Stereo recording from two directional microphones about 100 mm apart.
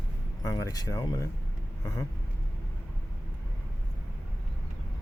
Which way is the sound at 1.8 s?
35° left (ahead or behind).